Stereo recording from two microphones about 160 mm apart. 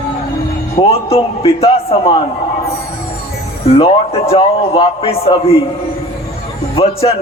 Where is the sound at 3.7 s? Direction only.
35° left (ahead or behind).